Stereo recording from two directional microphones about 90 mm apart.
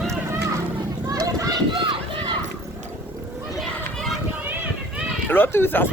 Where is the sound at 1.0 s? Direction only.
45° right (ahead or behind).